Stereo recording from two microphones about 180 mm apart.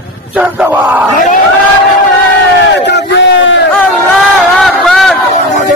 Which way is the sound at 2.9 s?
80° left.